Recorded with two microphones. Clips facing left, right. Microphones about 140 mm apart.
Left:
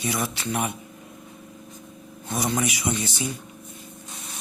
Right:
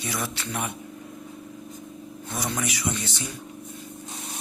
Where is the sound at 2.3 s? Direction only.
15° left (ahead or behind).